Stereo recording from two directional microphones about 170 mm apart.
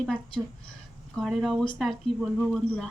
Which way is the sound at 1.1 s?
Centre (ahead or behind).